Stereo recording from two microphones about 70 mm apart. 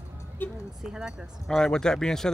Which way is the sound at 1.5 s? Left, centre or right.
Centre.